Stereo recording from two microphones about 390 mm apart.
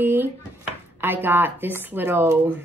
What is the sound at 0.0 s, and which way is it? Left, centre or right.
Dishes, centre.